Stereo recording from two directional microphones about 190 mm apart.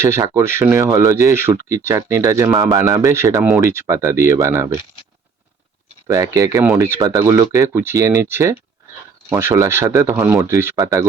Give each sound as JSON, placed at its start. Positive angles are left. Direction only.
{"t": 0.0, "sound": "speech", "side_deg": -15}
{"t": 6.1, "sound": "speech", "side_deg": -15}